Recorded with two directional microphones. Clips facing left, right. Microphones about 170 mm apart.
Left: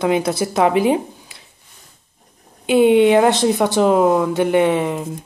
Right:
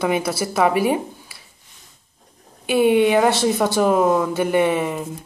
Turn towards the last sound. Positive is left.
turn(degrees=15)  # may be behind; listen again after turning